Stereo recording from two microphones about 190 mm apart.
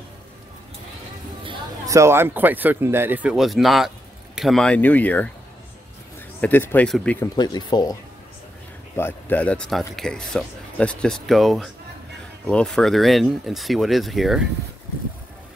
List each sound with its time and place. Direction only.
1.4 s a sound: 25° right (ahead or behind)
2.0 s speech: 15° right (ahead or behind); by 5.3 s 10° left (ahead or behind)
6.4 s speech: 10° left (ahead or behind)
7.3 s speech: 20° left (ahead or behind); by 14.4 s centre (ahead or behind)